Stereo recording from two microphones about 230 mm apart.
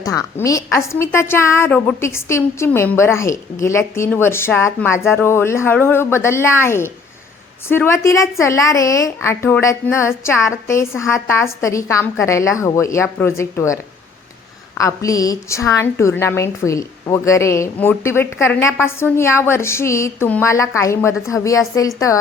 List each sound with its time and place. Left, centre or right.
0.0 s a woman's voice: centre
14.8 s a woman's voice: centre